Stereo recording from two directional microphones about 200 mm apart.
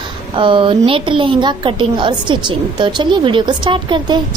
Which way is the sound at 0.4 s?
25° right (ahead or behind).